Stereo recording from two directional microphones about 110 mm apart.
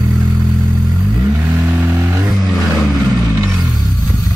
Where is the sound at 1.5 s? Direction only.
15° right (ahead or behind).